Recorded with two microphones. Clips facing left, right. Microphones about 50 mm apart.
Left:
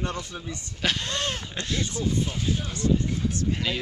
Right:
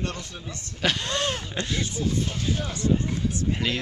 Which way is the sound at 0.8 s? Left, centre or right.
Centre.